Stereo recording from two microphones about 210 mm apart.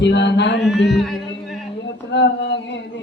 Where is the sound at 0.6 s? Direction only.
Centre (ahead or behind).